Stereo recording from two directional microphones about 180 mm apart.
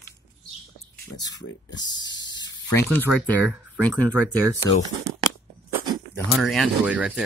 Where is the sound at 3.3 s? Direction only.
5° right (ahead or behind).